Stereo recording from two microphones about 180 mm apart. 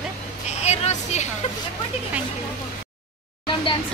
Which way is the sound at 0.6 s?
40° left (ahead or behind).